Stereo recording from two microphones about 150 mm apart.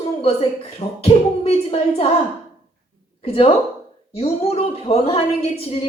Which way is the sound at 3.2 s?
40° left (ahead or behind).